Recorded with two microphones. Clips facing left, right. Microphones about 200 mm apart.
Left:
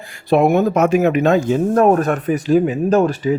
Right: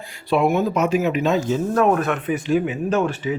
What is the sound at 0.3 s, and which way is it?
Speech, 45° left (ahead or behind).